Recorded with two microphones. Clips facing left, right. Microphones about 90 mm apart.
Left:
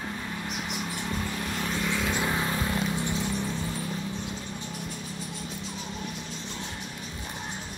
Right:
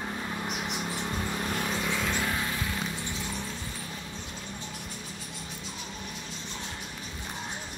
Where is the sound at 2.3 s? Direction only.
30° left (ahead or behind).